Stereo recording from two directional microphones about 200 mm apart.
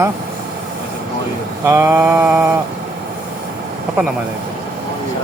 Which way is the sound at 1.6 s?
15° right (ahead or behind).